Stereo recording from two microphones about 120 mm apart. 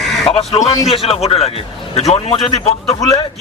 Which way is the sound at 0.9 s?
55° left (ahead or behind).